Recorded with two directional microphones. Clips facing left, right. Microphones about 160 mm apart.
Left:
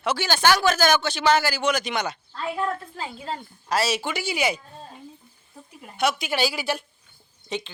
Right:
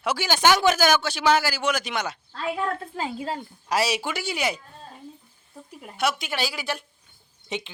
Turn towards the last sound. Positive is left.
turn(degrees=-20)  # may be behind; listen again after turning